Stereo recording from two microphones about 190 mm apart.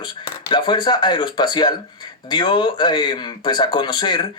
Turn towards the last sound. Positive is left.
turn(degrees=25)  # may be behind; listen again after turning